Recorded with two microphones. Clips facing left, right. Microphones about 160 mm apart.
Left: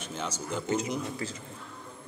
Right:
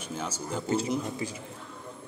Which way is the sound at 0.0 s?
10° right (ahead or behind).